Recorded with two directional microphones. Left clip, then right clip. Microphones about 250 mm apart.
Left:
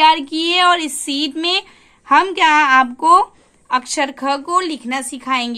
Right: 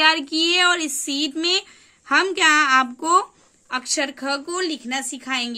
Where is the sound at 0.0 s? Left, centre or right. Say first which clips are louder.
Left 5 dB; centre.